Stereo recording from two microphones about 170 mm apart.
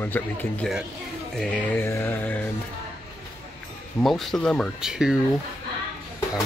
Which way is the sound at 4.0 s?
Centre (ahead or behind).